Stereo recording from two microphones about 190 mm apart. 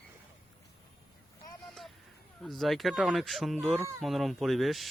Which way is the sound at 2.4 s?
Centre (ahead or behind).